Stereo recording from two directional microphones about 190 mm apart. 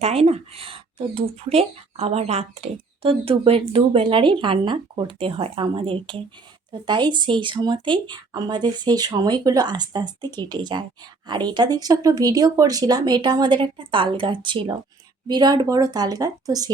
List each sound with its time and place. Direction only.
0.0 s speech: 35° right (ahead or behind)